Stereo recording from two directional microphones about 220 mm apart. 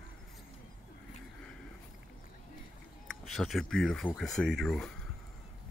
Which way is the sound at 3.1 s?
Centre (ahead or behind).